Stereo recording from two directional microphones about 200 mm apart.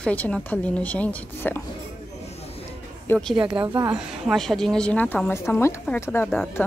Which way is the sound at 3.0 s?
Centre (ahead or behind).